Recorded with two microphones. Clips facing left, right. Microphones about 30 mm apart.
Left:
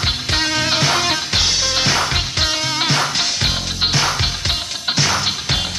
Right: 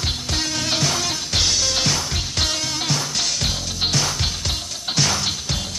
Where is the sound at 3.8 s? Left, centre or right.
Left.